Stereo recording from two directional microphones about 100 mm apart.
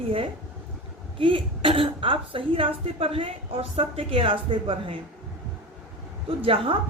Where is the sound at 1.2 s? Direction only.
60° right (ahead or behind).